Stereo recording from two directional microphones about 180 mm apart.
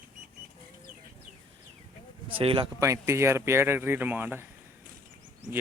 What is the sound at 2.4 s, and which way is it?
Speech, 30° right (ahead or behind).